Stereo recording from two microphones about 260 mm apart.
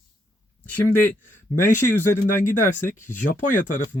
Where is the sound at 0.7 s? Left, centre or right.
Centre.